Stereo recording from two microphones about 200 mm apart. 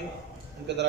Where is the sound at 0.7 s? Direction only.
60° right (ahead or behind).